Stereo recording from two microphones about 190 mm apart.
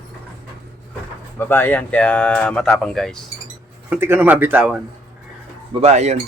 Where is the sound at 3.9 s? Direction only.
10° right (ahead or behind).